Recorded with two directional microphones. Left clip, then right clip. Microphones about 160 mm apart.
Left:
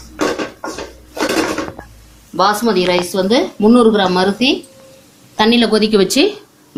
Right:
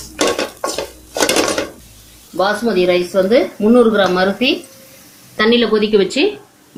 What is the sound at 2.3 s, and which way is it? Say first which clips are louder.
Speech: left 2 dB; 35° left (ahead or behind).